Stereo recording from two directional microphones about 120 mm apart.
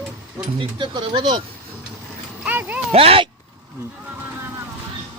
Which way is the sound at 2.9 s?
50° right (ahead or behind).